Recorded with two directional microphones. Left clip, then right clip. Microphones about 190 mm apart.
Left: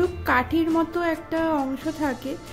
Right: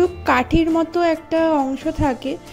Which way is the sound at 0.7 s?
25° right (ahead or behind).